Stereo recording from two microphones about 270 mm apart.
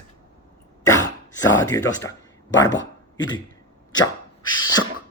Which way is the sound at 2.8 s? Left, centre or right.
Centre.